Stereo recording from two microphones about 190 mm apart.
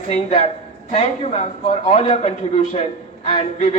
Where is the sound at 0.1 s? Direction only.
35° left (ahead or behind).